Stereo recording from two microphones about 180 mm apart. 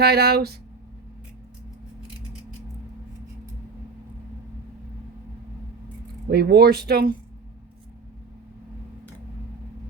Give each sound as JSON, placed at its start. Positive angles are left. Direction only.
{"t": 0.0, "sound": "speech", "side_deg": -60}
{"t": 6.3, "sound": "speech", "side_deg": -65}